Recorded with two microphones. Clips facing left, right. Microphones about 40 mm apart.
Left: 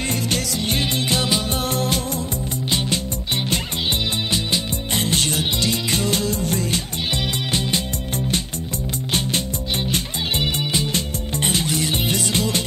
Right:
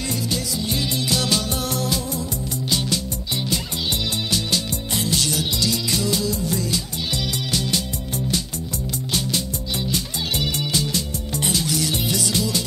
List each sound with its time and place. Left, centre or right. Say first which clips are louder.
0.1 s music: left 2 dB; left
1.1 s music: even; left
4.9 s music: left 2 dB; left
9.9 s music: left 2 dB; left